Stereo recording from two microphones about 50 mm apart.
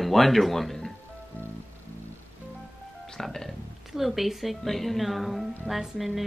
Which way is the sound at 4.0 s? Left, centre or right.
Centre.